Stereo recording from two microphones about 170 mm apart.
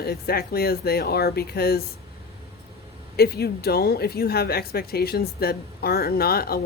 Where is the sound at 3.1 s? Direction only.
70° left (ahead or behind).